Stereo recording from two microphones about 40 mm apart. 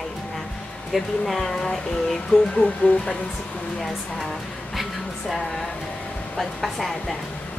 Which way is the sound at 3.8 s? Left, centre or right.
Centre.